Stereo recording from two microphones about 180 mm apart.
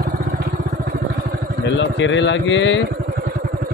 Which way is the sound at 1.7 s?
90° left.